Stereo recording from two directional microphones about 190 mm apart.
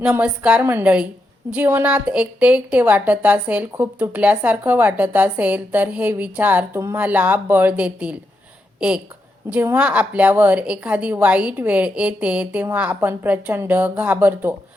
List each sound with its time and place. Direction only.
0.0 s a woman's voice: 5° right (ahead or behind)
9.5 s a woman's voice: 10° right (ahead or behind)